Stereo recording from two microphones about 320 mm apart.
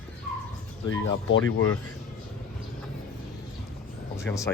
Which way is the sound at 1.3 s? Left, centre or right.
Left.